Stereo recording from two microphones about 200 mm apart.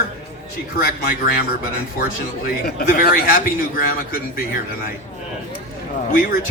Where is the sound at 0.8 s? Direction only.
50° left (ahead or behind).